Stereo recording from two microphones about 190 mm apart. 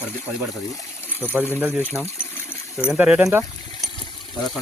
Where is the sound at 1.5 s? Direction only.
10° right (ahead or behind).